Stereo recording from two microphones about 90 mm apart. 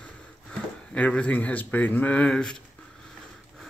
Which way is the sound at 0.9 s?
15° left (ahead or behind).